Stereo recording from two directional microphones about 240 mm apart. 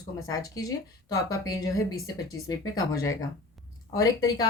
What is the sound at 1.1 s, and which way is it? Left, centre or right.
Speech, centre.